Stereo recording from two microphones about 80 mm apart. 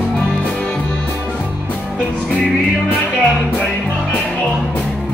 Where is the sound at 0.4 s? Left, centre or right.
Centre.